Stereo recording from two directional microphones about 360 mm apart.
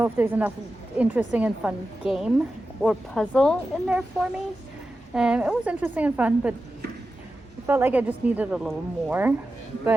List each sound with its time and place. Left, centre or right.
0.0 s a woman's voice: centre
7.7 s a woman's voice: centre